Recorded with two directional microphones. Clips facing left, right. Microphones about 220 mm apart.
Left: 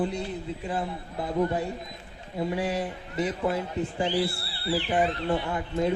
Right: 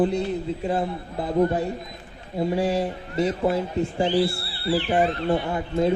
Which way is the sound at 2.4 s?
30° right (ahead or behind).